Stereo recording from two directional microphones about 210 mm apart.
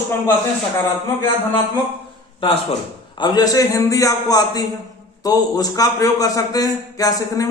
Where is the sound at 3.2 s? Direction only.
20° left (ahead or behind).